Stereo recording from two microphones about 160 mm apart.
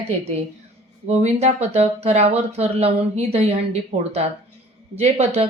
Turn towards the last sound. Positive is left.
turn(degrees=-40)  # may be behind; listen again after turning